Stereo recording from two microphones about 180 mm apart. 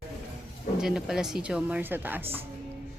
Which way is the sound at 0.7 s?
5° right (ahead or behind).